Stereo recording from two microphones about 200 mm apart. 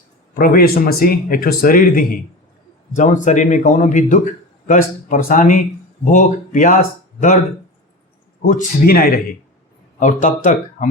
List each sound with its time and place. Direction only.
0.3 s speech: 45° left (ahead or behind)
8.4 s speech: 45° left (ahead or behind)